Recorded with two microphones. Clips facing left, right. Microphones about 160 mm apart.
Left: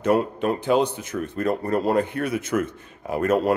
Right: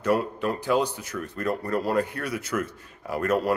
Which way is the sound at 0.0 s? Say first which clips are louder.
Left 3 dB; 20° left (ahead or behind).